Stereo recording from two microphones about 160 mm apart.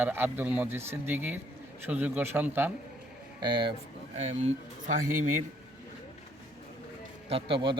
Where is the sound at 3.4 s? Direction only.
30° right (ahead or behind).